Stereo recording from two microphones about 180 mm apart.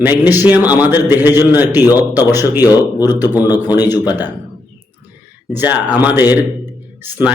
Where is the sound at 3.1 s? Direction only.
10° right (ahead or behind).